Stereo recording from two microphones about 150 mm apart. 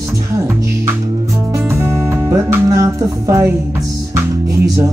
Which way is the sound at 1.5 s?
15° right (ahead or behind).